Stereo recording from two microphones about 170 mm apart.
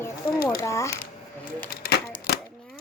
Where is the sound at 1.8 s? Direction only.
65° left (ahead or behind).